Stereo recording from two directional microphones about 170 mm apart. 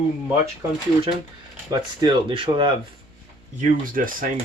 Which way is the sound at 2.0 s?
30° right (ahead or behind).